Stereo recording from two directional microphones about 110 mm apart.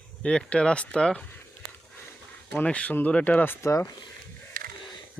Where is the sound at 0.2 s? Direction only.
10° left (ahead or behind).